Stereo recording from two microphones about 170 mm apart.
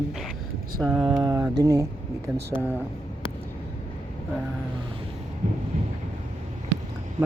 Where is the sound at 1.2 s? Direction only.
20° right (ahead or behind).